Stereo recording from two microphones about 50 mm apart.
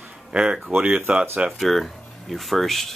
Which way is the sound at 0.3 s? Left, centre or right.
Right.